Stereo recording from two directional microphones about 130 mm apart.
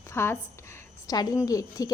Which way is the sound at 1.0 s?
30° left (ahead or behind).